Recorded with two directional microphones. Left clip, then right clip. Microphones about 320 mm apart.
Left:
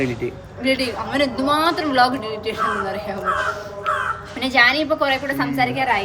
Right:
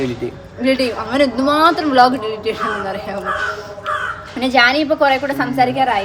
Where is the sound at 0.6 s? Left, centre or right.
Right.